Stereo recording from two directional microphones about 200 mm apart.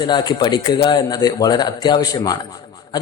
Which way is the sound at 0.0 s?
20° left (ahead or behind).